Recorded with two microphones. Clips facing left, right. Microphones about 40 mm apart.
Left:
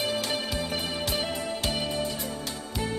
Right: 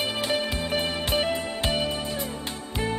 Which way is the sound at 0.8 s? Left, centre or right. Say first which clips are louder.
Right 4 dB; right.